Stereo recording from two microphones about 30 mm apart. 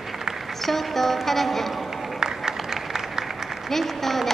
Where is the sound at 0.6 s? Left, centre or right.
Centre.